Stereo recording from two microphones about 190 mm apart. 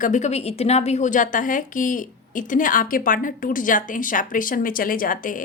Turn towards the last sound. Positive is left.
turn(degrees=45)  # may be behind; listen again after turning